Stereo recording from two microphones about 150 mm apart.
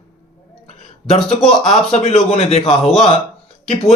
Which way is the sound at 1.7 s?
40° left (ahead or behind).